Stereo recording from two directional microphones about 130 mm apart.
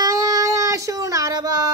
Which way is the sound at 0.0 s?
30° right (ahead or behind).